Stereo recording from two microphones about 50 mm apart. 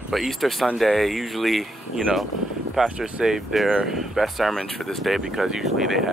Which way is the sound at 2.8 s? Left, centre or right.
Centre.